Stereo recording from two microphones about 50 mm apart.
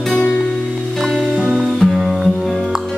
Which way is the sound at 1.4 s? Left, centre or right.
Right.